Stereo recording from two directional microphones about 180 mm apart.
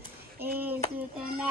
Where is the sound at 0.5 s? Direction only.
10° right (ahead or behind).